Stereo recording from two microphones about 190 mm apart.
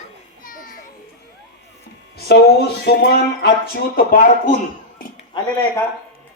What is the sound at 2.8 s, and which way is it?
Speech, 55° left (ahead or behind).